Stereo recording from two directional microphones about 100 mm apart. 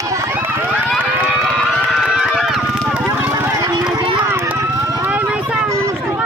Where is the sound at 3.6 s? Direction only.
40° right (ahead or behind).